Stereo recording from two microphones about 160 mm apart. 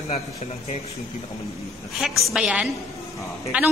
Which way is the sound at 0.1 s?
40° left (ahead or behind).